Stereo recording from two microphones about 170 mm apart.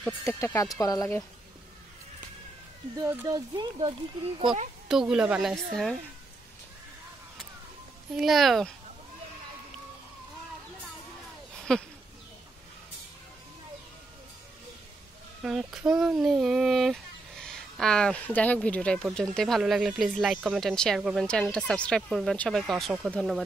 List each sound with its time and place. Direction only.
0.0 s speech: 15° left (ahead or behind)
3.0 s speech: 15° right (ahead or behind)
3.3 s speech: 25° right (ahead or behind)
4.8 s speech: 5° right (ahead or behind)
8.2 s speech: centre (ahead or behind)
11.5 s a sound: 5° left (ahead or behind)
15.4 s speech: 5° right (ahead or behind)